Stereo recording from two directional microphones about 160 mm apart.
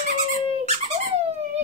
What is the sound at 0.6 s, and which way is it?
Squeak, 45° right (ahead or behind).